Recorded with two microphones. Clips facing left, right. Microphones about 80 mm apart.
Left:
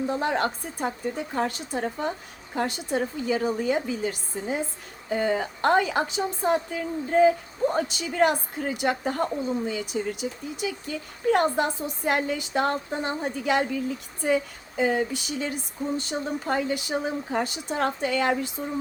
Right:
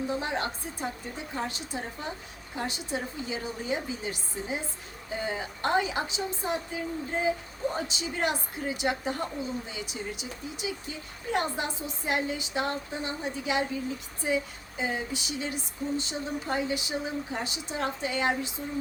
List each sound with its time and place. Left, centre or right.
0.1 s speech: left